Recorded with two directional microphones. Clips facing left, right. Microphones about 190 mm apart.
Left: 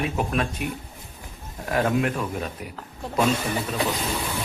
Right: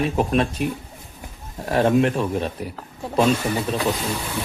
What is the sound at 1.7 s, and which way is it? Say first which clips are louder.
Speech: right 5 dB; 30° right (ahead or behind).